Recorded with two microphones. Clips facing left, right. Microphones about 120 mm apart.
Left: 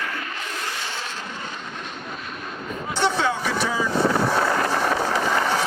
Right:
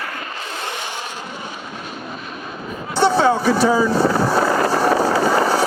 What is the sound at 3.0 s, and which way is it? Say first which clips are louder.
Speech: right 8 dB; 35° right (ahead or behind).